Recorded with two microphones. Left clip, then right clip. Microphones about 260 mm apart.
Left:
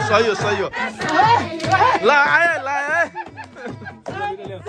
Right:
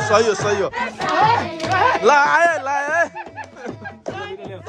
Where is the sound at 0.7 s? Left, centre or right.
Right.